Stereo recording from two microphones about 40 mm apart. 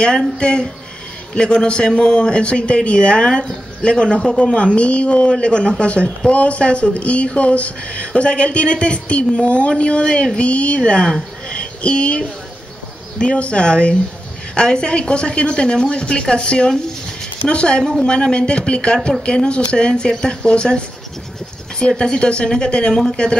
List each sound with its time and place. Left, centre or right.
0.0 s speech: left